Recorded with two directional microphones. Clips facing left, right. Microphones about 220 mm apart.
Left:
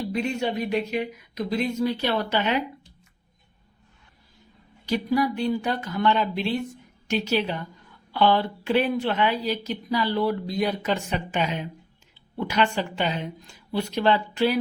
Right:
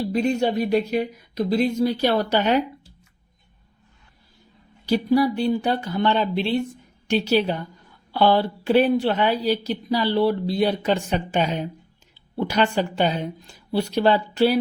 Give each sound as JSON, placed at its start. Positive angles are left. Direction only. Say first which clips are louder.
{"t": 0.0, "sound": "speech", "louder": "right 5 dB", "side_deg": -40}
{"t": 4.9, "sound": "speech", "louder": "right 4 dB", "side_deg": -35}